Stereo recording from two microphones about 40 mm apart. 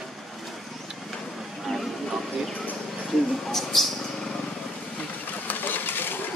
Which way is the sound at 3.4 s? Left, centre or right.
Centre.